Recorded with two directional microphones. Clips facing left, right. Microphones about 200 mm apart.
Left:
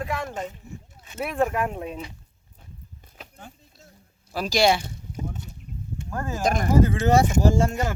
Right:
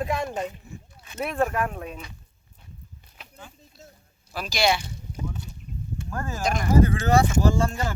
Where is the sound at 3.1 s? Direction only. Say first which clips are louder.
Left 2 dB; 45° left (ahead or behind).